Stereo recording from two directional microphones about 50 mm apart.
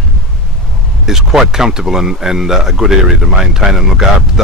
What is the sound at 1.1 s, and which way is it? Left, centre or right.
Speech, centre.